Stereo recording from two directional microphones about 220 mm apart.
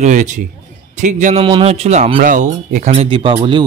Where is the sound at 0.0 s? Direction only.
35° right (ahead or behind).